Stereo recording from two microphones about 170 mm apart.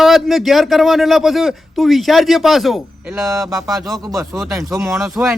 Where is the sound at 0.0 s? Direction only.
Centre (ahead or behind).